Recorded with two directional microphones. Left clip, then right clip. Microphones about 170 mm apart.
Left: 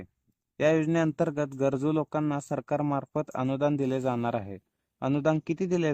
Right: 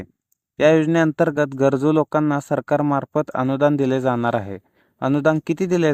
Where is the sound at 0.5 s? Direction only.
40° right (ahead or behind).